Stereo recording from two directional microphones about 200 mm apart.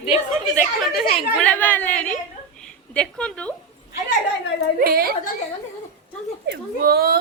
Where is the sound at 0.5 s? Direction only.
Centre (ahead or behind).